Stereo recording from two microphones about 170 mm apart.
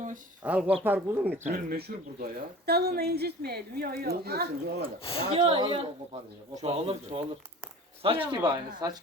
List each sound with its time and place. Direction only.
0.4 s speech: 10° right (ahead or behind)
1.5 s speech: 60° right (ahead or behind)
5.3 s speech: 35° right (ahead or behind)
8.4 s speech: 20° right (ahead or behind)